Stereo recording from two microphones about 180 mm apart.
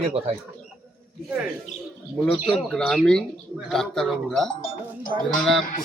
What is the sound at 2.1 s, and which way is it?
Speech, 5° left (ahead or behind).